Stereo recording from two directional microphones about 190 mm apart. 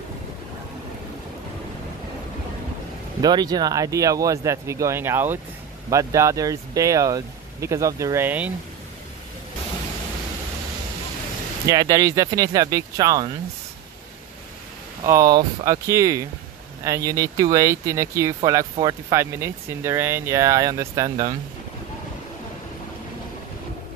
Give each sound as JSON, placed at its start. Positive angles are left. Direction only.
{"t": 3.2, "sound": "speech", "side_deg": -20}
{"t": 11.6, "sound": "speech", "side_deg": -20}
{"t": 15.0, "sound": "speech", "side_deg": -20}